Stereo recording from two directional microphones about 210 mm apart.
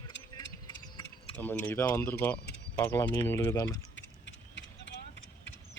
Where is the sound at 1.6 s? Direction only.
10° left (ahead or behind).